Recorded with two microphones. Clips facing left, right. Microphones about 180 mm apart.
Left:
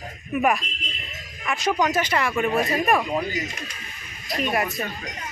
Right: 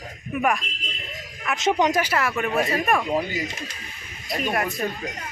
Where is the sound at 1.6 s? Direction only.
25° right (ahead or behind).